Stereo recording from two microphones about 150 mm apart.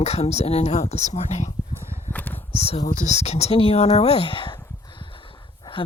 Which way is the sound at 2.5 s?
45° left (ahead or behind).